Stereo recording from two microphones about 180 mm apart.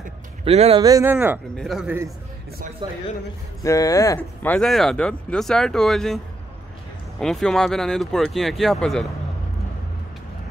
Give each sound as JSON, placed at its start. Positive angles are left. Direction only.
{"t": 0.5, "sound": "speech", "side_deg": -35}
{"t": 0.8, "sound": "speech", "side_deg": -20}
{"t": 1.6, "sound": "speech", "side_deg": 0}
{"t": 2.8, "sound": "speech", "side_deg": -25}
{"t": 3.6, "sound": "speech", "side_deg": 20}